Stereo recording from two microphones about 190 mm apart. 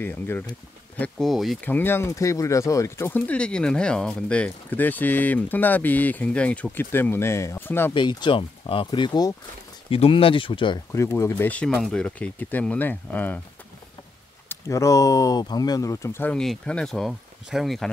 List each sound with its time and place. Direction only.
0.0 s speech: 10° left (ahead or behind)
7.9 s speech: 25° left (ahead or behind)
14.5 s speech: 15° left (ahead or behind); by 17.8 s centre (ahead or behind)